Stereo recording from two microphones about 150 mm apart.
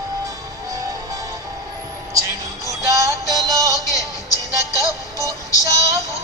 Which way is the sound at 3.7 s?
20° left (ahead or behind).